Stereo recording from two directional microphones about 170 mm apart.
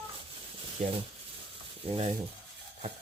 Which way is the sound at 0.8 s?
45° right (ahead or behind).